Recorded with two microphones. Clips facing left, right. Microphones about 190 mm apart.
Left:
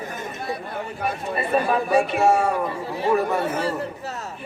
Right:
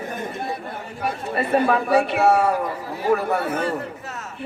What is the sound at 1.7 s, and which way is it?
Speech, 65° right (ahead or behind).